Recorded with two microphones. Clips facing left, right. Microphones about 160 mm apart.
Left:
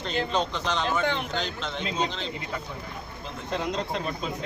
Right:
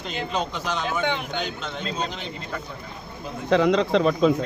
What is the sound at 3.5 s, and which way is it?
Speech, 90° right.